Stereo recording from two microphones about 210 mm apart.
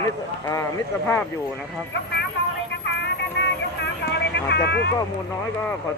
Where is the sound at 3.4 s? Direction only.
55° left (ahead or behind).